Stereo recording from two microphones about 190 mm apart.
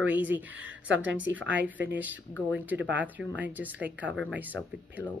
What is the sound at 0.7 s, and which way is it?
Speech, 75° right (ahead or behind).